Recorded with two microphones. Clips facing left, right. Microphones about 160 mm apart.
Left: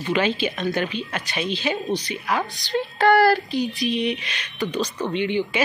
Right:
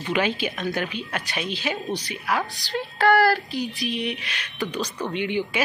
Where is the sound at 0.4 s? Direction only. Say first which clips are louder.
Left 3 dB; 10° right (ahead or behind).